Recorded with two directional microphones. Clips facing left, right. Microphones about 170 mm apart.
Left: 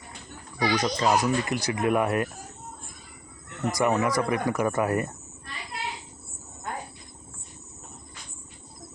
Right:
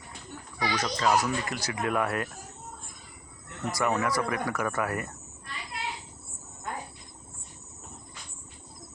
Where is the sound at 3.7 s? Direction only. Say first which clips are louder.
Left 4 dB; 15° left (ahead or behind).